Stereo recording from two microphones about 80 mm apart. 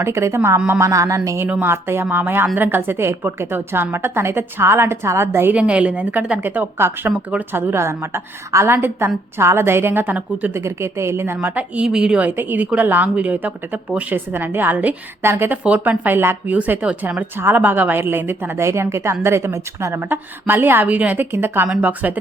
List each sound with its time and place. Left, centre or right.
0.0 s a woman's voice: right
1.6 s a woman's voice: right
5.5 s a woman's voice: centre
6.7 s a woman's voice: right
10.5 s a woman's voice: right
11.3 s a woman's voice: centre